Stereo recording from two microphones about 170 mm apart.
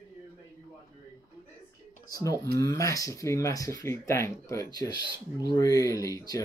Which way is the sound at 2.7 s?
20° left (ahead or behind).